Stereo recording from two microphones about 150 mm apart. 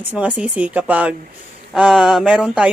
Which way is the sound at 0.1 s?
10° right (ahead or behind).